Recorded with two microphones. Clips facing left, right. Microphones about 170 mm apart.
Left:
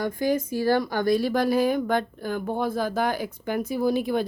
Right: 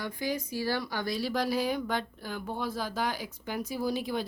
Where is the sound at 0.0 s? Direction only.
50° left (ahead or behind).